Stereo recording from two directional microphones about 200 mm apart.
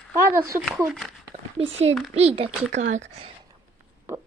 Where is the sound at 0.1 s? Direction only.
15° right (ahead or behind).